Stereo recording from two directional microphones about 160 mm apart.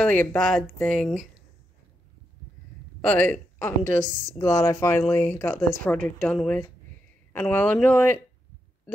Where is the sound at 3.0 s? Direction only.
10° left (ahead or behind).